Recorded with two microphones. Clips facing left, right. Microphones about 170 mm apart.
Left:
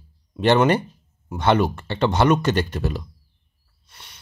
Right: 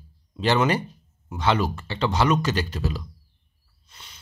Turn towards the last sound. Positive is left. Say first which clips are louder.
# left 4 dB
turn(degrees=60)  # may be behind; listen again after turning